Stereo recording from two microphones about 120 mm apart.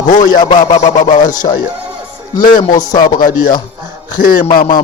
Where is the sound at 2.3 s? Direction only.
35° left (ahead or behind).